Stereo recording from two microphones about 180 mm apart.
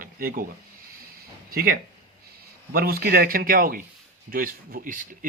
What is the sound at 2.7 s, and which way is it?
Speech, 55° right (ahead or behind).